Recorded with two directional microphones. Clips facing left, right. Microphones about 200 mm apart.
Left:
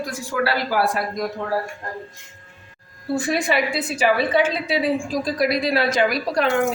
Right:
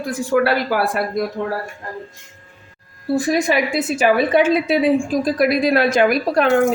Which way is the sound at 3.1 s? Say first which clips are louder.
Right 4 dB; 40° right (ahead or behind).